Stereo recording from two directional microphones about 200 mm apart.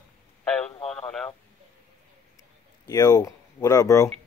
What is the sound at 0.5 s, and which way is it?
Radio, 5° left (ahead or behind).